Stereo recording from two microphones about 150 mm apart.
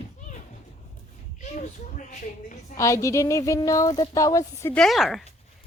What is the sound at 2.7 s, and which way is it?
Speech, 20° left (ahead or behind).